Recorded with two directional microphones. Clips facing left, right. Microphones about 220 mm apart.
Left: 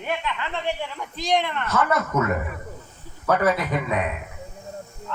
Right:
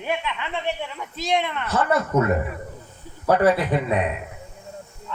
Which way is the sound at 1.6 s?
30° right (ahead or behind).